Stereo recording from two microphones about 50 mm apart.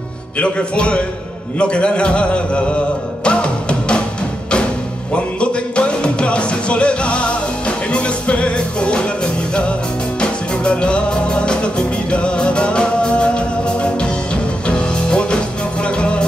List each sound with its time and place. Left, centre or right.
0.4 s a man's voice: left
3.3 s music: left
5.1 s music: left